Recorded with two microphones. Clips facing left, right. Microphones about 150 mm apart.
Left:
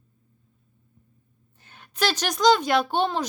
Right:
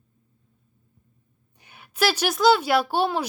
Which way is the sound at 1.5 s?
10° right (ahead or behind).